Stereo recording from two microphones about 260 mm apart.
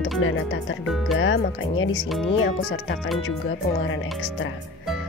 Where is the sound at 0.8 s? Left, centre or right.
Centre.